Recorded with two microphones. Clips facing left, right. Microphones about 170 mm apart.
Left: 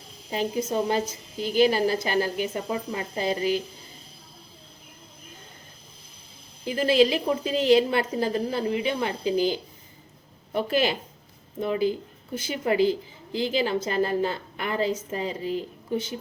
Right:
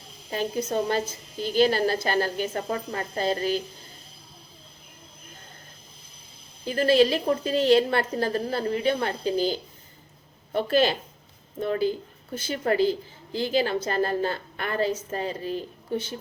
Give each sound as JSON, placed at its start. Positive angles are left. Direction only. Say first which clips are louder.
{"t": 0.3, "sound": "a woman's voice", "louder": "left 1 dB", "side_deg": 15}
{"t": 6.7, "sound": "a woman's voice", "louder": "right 1 dB", "side_deg": 15}